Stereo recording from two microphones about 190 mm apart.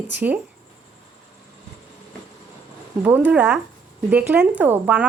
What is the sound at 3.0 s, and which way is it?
Speech, 10° right (ahead or behind).